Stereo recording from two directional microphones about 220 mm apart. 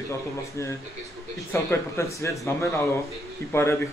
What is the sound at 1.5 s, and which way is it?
Speech, 10° left (ahead or behind).